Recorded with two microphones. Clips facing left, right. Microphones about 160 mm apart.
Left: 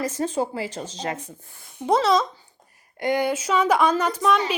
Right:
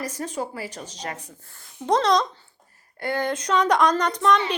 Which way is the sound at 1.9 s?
5° left (ahead or behind).